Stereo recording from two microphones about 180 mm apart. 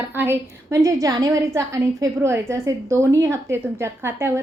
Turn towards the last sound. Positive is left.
turn(degrees=-15)  # may be behind; listen again after turning